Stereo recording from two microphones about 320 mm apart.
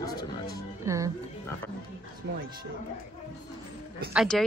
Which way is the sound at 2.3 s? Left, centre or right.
Right.